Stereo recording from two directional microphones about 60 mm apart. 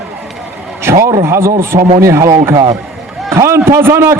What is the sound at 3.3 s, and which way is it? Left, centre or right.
Speech, right.